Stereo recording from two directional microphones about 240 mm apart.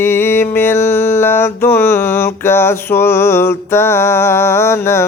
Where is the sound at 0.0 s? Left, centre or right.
Centre.